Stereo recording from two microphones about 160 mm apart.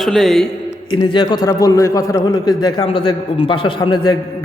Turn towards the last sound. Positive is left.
turn(degrees=25)  # may be behind; listen again after turning